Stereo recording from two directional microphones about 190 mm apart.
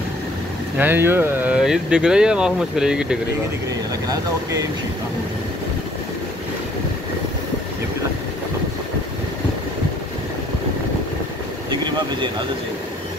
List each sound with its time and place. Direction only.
0.7 s speech: 10° right (ahead or behind)
4.1 s speech: 15° right (ahead or behind)